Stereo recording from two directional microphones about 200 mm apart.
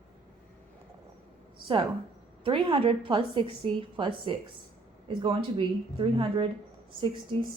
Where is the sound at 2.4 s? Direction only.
25° right (ahead or behind).